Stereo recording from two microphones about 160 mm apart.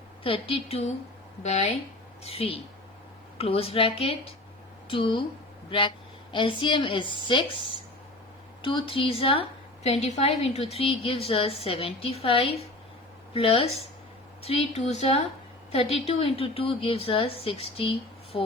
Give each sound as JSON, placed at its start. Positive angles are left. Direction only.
{"t": 0.2, "sound": "a woman's voice", "side_deg": 35}